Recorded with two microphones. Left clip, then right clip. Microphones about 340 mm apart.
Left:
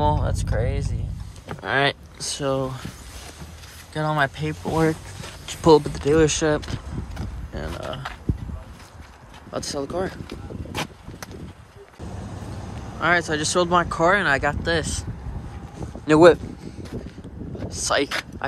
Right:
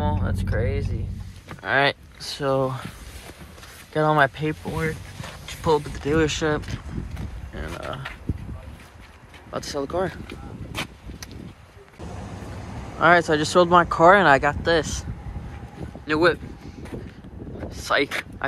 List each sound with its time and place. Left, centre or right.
0.0 s a sound: centre
1.6 s speech: centre
3.9 s speech: centre
9.5 s speech: centre
12.0 s a sound: centre
13.0 s speech: centre
16.1 s speech: centre
17.6 s speech: centre